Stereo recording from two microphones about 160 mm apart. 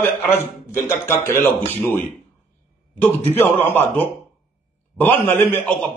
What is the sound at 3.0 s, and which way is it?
A man's voice, 10° left (ahead or behind).